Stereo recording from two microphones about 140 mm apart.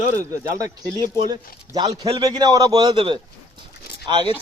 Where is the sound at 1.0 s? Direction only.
90° right.